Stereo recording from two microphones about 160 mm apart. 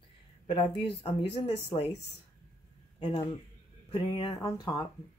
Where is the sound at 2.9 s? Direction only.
35° left (ahead or behind).